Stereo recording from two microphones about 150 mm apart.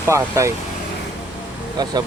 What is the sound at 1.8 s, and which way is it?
Speech, 30° right (ahead or behind).